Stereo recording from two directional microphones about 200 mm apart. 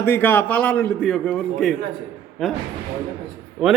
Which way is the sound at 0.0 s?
10° left (ahead or behind).